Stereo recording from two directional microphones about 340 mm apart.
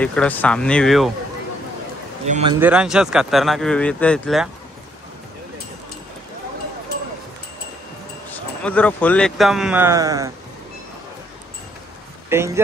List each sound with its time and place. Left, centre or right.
0.0 s speech: centre
2.2 s a man's voice: centre
2.6 s speech: centre
8.3 s speech: centre
12.3 s speech: centre